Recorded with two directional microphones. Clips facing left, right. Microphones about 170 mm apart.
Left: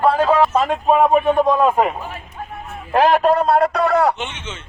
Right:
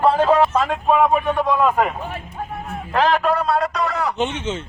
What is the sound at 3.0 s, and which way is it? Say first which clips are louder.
A man's voice: left 4 dB; 40° left (ahead or behind).